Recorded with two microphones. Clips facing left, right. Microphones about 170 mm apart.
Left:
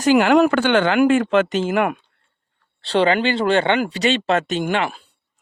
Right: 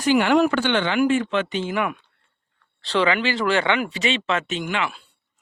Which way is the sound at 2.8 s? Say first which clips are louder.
Left 4 dB; 35° left (ahead or behind).